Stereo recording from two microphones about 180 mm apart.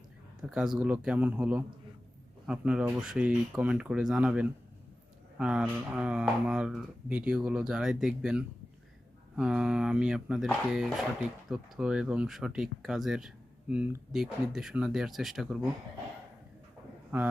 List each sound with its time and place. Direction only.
0.4 s speech: 5° right (ahead or behind)